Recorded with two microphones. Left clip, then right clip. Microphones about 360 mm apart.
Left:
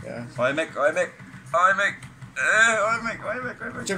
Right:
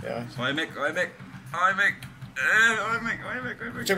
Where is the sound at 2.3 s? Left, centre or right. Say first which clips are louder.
Left 2 dB; centre.